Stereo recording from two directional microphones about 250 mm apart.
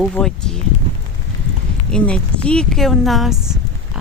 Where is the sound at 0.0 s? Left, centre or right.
Centre.